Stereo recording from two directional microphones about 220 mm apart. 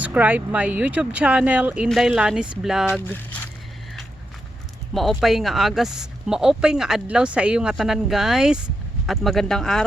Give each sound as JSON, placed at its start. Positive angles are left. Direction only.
{"t": 0.0, "sound": "speech", "side_deg": -5}
{"t": 4.9, "sound": "speech", "side_deg": 0}